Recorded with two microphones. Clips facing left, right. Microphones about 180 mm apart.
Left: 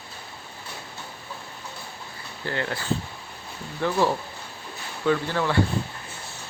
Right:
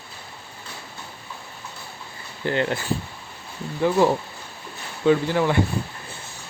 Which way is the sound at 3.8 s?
15° right (ahead or behind).